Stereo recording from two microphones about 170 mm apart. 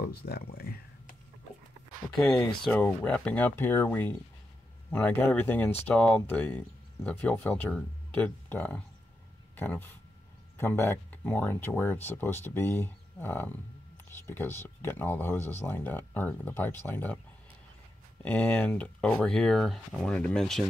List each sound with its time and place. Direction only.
0.0 s speech: 70° left (ahead or behind)
2.1 s speech: 5° left (ahead or behind)
18.2 s speech: 10° left (ahead or behind)